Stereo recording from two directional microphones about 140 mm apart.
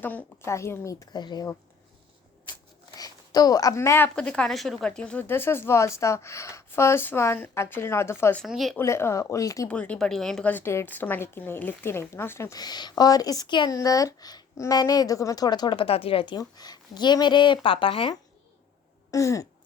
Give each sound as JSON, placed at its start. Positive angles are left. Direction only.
{"t": 0.0, "sound": "a woman's voice", "side_deg": 10}
{"t": 2.5, "sound": "speech", "side_deg": 25}
{"t": 8.4, "sound": "speech", "side_deg": 0}
{"t": 8.8, "sound": "a woman's voice", "side_deg": 20}
{"t": 9.6, "sound": "a woman's voice", "side_deg": 10}
{"t": 19.1, "sound": "a woman's voice", "side_deg": 20}